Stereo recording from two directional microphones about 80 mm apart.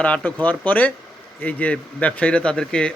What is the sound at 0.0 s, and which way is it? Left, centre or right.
A man's voice, centre.